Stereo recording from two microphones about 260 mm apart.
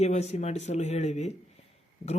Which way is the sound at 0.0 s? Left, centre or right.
Left.